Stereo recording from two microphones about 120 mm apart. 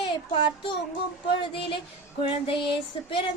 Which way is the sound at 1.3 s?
45° left (ahead or behind).